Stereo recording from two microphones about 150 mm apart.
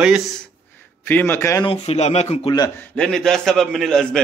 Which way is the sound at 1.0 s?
15° left (ahead or behind).